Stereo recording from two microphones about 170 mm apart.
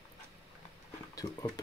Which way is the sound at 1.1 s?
20° left (ahead or behind).